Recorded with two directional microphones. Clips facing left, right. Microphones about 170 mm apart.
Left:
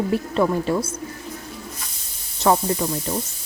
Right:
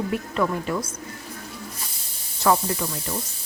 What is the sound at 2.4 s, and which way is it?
Speech, 30° left (ahead or behind).